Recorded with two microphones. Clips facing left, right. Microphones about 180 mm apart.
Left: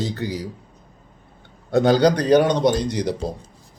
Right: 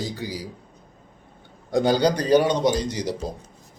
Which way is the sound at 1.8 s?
65° left (ahead or behind).